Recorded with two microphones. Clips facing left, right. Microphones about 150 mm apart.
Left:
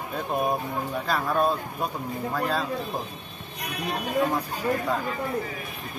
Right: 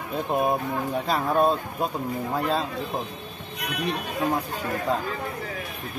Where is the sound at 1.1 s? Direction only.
25° right (ahead or behind).